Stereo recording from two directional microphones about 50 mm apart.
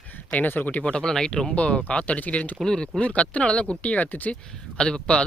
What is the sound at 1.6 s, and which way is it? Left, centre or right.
Speech, left.